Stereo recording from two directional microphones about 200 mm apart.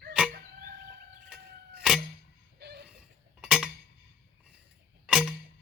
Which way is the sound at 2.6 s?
55° right (ahead or behind).